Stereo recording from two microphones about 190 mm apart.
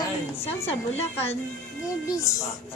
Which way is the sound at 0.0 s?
30° left (ahead or behind).